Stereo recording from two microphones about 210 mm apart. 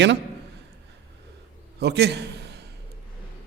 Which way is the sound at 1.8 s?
55° right (ahead or behind).